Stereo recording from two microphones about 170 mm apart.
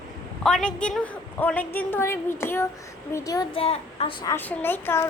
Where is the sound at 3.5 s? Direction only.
35° left (ahead or behind).